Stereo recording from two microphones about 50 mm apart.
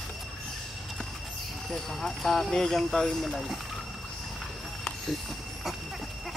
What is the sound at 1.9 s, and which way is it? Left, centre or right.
Speech, centre.